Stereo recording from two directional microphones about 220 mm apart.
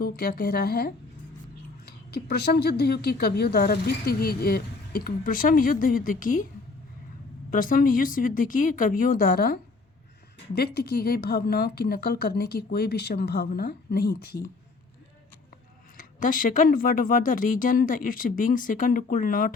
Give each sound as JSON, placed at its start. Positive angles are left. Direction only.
{"t": 0.0, "sound": "speech", "side_deg": 45}
{"t": 2.0, "sound": "speech", "side_deg": 45}
{"t": 7.5, "sound": "speech", "side_deg": 40}
{"t": 16.0, "sound": "speech", "side_deg": 40}